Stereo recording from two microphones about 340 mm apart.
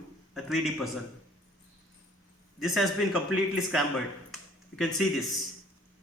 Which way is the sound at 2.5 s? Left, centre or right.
Centre.